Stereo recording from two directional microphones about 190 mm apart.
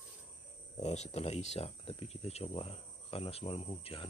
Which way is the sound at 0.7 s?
35° left (ahead or behind).